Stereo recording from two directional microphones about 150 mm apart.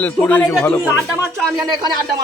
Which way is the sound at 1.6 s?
30° right (ahead or behind).